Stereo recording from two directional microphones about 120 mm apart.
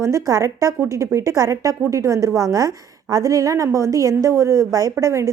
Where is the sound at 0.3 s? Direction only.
25° right (ahead or behind).